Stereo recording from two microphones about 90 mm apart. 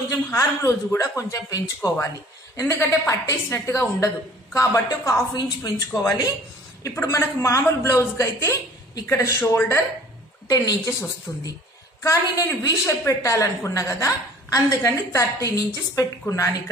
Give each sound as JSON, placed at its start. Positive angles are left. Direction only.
{"t": 0.3, "sound": "a man's voice", "side_deg": 35}
{"t": 6.8, "sound": "a man's voice", "side_deg": 35}
{"t": 10.5, "sound": "a man's voice", "side_deg": 40}